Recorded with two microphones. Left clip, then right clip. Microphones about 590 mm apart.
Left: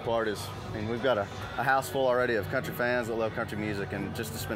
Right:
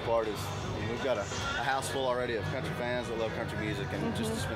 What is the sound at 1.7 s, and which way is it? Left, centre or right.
Speech, left.